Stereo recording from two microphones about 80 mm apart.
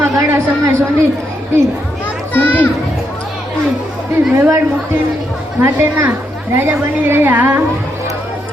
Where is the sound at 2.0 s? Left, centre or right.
Left.